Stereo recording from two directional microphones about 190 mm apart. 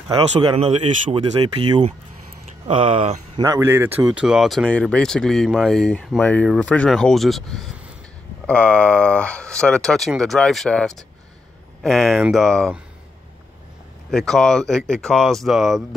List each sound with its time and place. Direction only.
0.1 s speech: 25° right (ahead or behind)
3.3 s speech: 15° right (ahead or behind); by 12.8 s centre (ahead or behind)
14.1 s speech: centre (ahead or behind)